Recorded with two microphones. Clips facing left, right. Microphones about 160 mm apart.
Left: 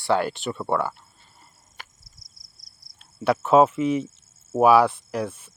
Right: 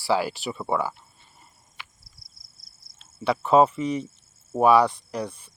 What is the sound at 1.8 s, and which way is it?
Cricket, 45° left (ahead or behind).